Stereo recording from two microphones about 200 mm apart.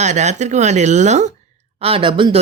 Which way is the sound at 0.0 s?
35° right (ahead or behind).